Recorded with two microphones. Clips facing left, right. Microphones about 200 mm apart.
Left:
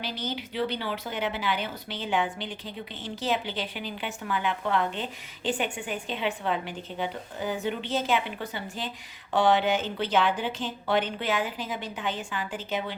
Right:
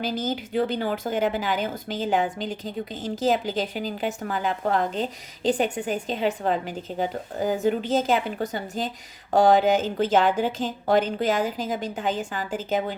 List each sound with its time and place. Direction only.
0.0 s speech: 45° right (ahead or behind)